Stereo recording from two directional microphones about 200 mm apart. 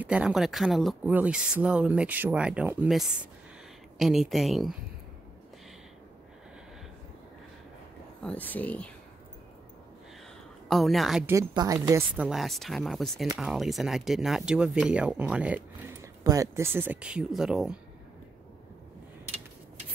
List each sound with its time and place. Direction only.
0.0 s speech: 5° right (ahead or behind)
8.2 s speech: 5° left (ahead or behind)
10.7 s speech: centre (ahead or behind)
11.3 s a woman's voice: 15° right (ahead or behind)
12.3 s speech: centre (ahead or behind)